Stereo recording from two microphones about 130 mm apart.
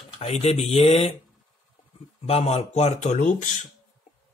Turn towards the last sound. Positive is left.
turn(degrees=70)  # may be behind; listen again after turning